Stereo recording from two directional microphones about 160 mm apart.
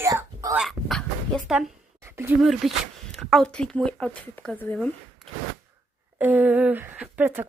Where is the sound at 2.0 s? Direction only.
15° right (ahead or behind).